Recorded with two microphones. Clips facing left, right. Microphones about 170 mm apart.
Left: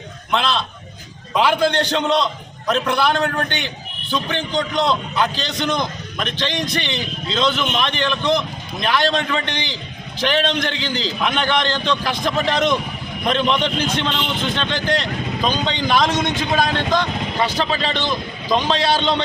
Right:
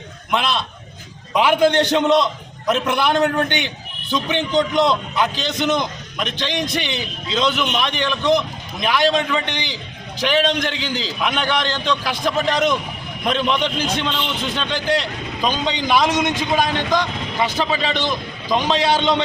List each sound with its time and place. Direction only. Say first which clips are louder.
0.3 s a man's voice: left 1 dB; 15° right (ahead or behind)